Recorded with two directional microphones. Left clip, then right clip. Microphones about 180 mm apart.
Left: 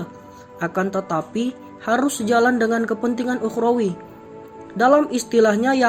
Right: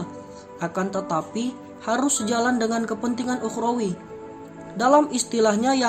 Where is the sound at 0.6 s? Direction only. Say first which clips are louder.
Left 4 dB; 15° left (ahead or behind).